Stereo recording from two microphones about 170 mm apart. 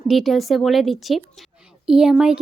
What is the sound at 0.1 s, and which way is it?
Speech, centre (ahead or behind).